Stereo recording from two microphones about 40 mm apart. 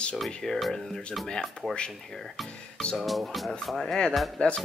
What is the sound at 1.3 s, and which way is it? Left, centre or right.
Speech, centre.